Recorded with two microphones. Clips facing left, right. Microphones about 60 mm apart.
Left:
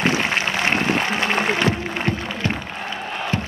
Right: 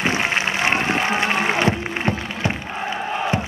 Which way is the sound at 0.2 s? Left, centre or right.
Centre.